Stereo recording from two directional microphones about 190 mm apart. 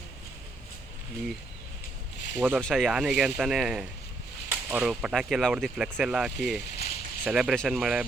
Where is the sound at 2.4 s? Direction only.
10° right (ahead or behind).